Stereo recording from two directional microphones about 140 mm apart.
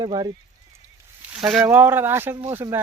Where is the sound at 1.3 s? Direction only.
5° right (ahead or behind).